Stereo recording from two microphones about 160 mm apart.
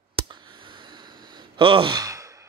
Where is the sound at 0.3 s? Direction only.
30° right (ahead or behind).